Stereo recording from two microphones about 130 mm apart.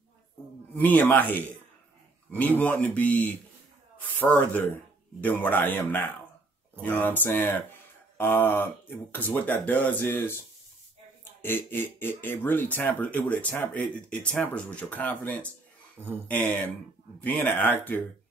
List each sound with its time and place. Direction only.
0.7 s speech: 15° left (ahead or behind)
2.6 s speech: 10° left (ahead or behind)
11.4 s speech: 15° left (ahead or behind)